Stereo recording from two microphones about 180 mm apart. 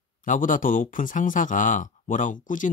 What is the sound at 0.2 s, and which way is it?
Speech, 45° left (ahead or behind).